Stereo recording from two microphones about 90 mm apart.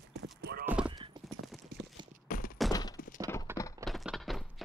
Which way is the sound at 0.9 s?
60° right (ahead or behind).